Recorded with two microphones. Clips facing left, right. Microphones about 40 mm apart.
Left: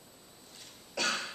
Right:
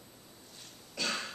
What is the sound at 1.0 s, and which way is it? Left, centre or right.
Cough, left.